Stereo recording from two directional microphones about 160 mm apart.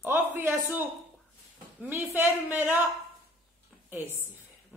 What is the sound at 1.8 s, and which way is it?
A woman's voice, 15° right (ahead or behind).